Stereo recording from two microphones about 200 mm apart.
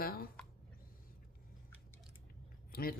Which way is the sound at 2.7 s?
45° left (ahead or behind).